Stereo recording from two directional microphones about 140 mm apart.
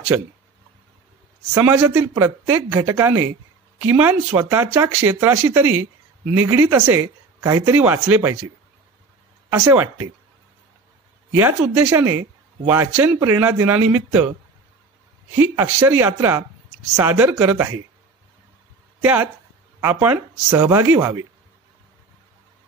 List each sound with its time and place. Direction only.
1.5 s speech: 15° right (ahead or behind)
9.5 s speech: 20° right (ahead or behind)
11.3 s speech: 15° right (ahead or behind)
15.3 s speech: 15° right (ahead or behind)
19.8 s speech: 15° right (ahead or behind)